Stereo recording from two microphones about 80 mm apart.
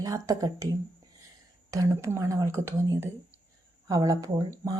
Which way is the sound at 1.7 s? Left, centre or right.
Right.